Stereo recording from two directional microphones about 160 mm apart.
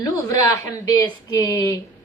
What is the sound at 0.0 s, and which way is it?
A woman's voice, 20° left (ahead or behind).